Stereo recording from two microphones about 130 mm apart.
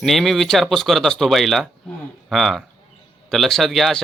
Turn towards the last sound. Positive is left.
turn(degrees=0)  # may be behind; listen again after turning